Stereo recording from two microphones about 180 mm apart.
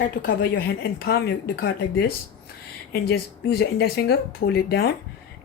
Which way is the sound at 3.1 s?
60° left (ahead or behind).